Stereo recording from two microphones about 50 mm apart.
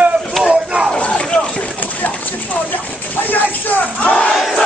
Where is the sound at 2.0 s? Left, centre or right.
Left.